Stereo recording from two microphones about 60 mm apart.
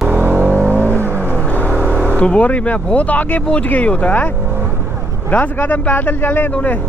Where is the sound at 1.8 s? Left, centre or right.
Right.